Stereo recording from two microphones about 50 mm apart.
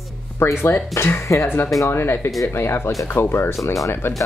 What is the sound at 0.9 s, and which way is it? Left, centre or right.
Speech, left.